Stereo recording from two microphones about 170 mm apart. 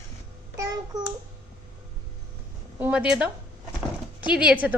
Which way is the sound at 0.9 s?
20° right (ahead or behind).